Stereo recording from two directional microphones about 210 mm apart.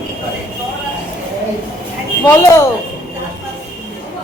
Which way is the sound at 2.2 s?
10° left (ahead or behind).